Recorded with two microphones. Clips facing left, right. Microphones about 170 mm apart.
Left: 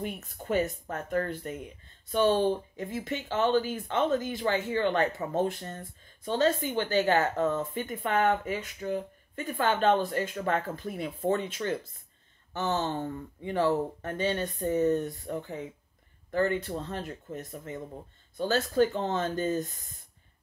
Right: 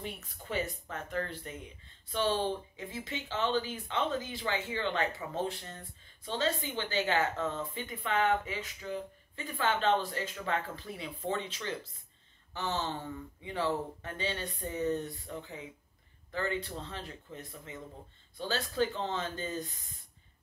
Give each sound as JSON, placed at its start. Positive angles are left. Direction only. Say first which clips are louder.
{"t": 0.0, "sound": "speech", "louder": "left 6 dB", "side_deg": 45}